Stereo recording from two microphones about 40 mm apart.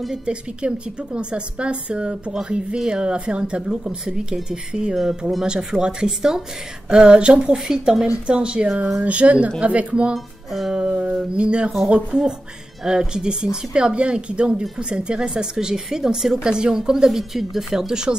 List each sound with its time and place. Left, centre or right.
0.1 s a woman's voice: right
10.1 s music: centre
11.3 s a woman's voice: right
12.8 s a woman's voice: centre